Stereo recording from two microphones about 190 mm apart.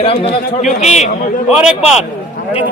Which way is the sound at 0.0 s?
30° left (ahead or behind).